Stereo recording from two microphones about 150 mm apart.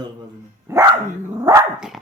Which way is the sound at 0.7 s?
20° right (ahead or behind).